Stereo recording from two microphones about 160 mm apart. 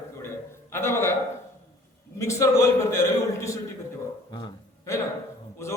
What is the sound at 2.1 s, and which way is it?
A man's voice, 20° left (ahead or behind).